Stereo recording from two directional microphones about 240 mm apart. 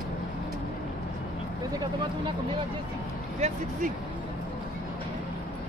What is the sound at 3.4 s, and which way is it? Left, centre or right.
Speech, right.